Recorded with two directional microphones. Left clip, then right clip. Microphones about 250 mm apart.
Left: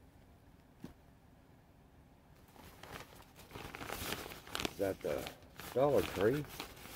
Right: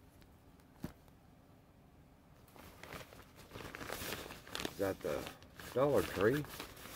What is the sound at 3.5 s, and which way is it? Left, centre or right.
Crumpling, centre.